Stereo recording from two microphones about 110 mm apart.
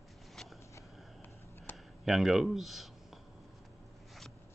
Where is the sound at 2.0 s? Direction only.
Centre (ahead or behind).